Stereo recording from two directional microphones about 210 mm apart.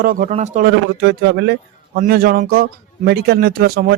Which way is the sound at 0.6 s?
55° right (ahead or behind).